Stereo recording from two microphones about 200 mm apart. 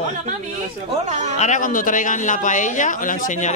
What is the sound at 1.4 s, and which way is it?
A man's voice, 40° left (ahead or behind).